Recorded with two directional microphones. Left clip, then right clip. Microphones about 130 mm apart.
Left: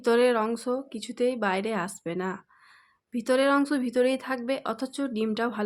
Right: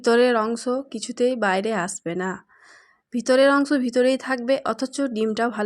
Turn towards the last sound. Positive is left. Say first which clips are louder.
# right 5 dB
turn(degrees=-30)  # may be behind; listen again after turning